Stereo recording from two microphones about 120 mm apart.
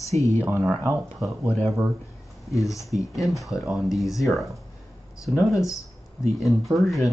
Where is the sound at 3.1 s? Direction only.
Centre (ahead or behind).